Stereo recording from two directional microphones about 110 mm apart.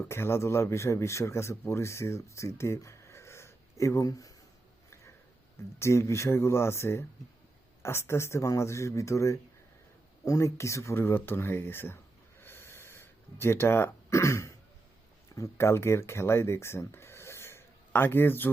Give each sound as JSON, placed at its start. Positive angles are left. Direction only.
{"t": 0.0, "sound": "speech", "side_deg": 25}
{"t": 5.8, "sound": "speech", "side_deg": 25}
{"t": 12.4, "sound": "a sound", "side_deg": 20}
{"t": 15.4, "sound": "speech", "side_deg": 25}